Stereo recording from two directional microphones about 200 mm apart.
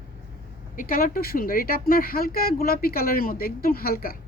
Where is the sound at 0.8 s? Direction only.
45° left (ahead or behind).